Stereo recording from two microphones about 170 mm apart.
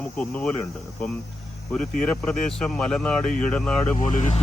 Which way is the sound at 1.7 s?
5° left (ahead or behind).